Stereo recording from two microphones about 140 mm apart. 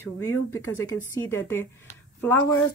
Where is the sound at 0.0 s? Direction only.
15° left (ahead or behind).